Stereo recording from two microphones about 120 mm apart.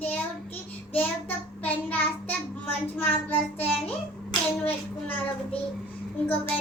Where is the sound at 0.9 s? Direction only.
15° left (ahead or behind).